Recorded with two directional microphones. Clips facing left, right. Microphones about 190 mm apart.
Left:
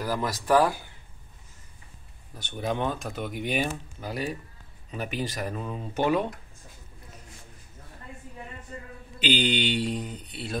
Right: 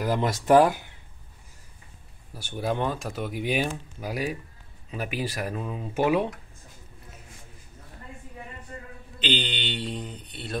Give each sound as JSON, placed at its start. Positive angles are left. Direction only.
{"t": 0.0, "sound": "speech", "side_deg": -25}
{"t": 2.3, "sound": "speech", "side_deg": -5}
{"t": 9.2, "sound": "mantra", "side_deg": 10}